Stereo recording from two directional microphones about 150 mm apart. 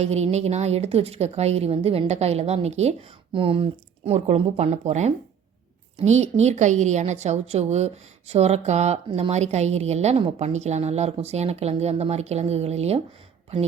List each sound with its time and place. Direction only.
0.0 s a woman's voice: 45° right (ahead or behind)
9.0 s speech: 35° right (ahead or behind)
9.3 s a woman's voice: 50° right (ahead or behind)